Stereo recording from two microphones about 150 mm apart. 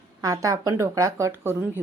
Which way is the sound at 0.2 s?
25° right (ahead or behind).